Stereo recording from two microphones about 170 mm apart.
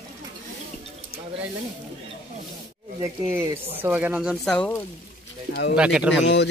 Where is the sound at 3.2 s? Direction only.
10° right (ahead or behind).